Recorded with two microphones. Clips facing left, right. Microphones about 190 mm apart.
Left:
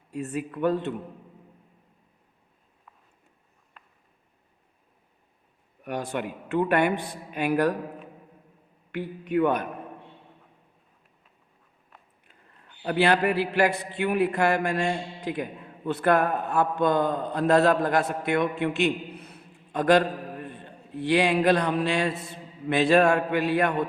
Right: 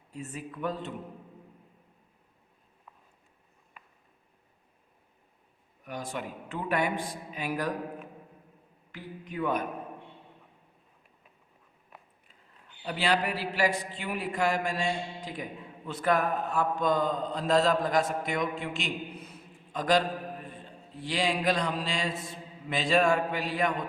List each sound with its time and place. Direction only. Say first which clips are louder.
0.1 s a man's voice: left 8 dB; 65° left (ahead or behind)
3.8 s a sound: even; 10° right (ahead or behind)
5.8 s a man's voice: left 6 dB; 65° left (ahead or behind)
8.9 s a man's voice: left 13 dB; 65° left (ahead or behind)
12.8 s a man's voice: left 6 dB; 60° left (ahead or behind)